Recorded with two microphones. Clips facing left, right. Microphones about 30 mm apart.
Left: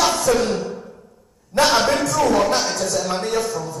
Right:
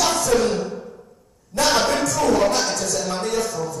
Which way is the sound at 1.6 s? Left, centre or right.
Centre.